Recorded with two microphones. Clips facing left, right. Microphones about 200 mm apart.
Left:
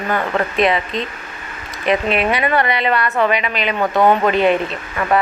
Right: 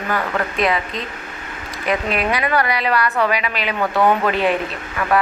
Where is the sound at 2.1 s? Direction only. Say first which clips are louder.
Left 2 dB; centre (ahead or behind).